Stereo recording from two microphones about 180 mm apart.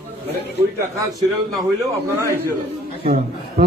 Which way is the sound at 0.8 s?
15° right (ahead or behind).